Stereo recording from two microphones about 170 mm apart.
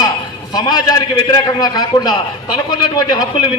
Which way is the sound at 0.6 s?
25° left (ahead or behind).